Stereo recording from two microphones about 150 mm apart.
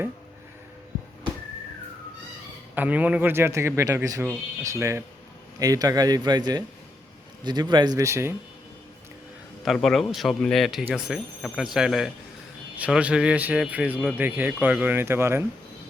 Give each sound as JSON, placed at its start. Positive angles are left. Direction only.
{"t": 2.7, "sound": "speech", "side_deg": -10}
{"t": 9.6, "sound": "speech", "side_deg": 0}